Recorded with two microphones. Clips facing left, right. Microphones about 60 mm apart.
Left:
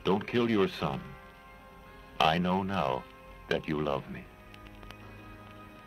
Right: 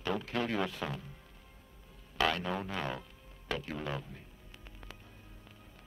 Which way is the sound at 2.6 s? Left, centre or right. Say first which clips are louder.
Left 7 dB; left.